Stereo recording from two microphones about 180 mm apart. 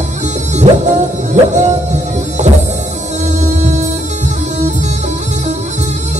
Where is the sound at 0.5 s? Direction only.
40° right (ahead or behind).